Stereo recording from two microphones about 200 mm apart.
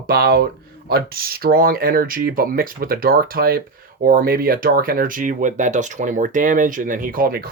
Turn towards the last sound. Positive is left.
turn(degrees=-45)  # may be behind; listen again after turning